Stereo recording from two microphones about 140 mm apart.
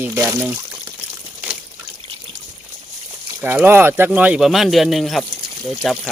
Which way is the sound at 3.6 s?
15° right (ahead or behind).